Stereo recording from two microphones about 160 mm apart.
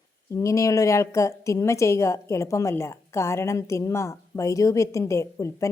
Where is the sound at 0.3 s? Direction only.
20° left (ahead or behind).